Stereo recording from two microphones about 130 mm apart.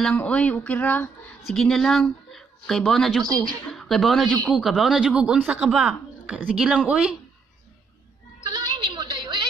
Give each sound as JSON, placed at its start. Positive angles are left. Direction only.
{"t": 0.0, "sound": "speech", "side_deg": 10}
{"t": 1.5, "sound": "a woman's voice", "side_deg": 5}
{"t": 8.4, "sound": "music", "side_deg": -35}